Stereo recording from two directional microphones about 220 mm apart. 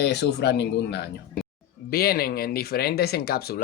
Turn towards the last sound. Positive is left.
turn(degrees=45)  # may be behind; listen again after turning